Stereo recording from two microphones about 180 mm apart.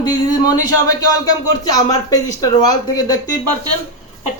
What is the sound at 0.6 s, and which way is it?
Speech, 20° left (ahead or behind).